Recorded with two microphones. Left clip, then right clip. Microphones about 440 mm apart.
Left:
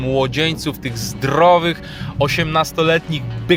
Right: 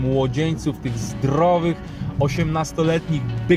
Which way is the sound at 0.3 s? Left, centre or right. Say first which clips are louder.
Left 5 dB; left.